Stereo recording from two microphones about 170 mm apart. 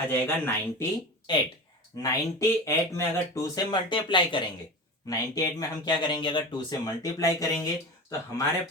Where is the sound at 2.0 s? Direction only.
15° left (ahead or behind).